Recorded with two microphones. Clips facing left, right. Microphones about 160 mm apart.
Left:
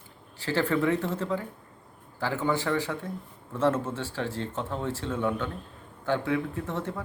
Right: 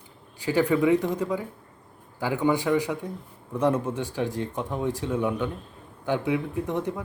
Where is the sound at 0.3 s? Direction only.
15° right (ahead or behind).